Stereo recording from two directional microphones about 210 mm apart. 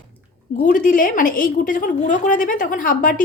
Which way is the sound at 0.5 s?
40° left (ahead or behind).